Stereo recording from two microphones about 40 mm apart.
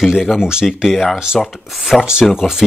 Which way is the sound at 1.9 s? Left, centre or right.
Centre.